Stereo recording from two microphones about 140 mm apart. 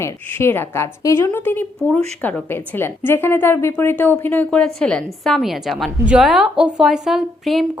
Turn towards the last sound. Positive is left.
turn(degrees=0)  # may be behind; listen again after turning